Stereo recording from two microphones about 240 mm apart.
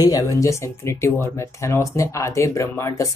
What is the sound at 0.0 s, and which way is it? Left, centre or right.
Speech, centre.